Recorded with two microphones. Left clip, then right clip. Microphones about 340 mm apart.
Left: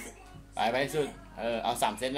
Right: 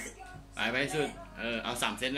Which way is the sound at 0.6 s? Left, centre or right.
Centre.